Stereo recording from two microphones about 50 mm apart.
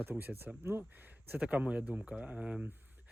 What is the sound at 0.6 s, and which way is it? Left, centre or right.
Speech, right.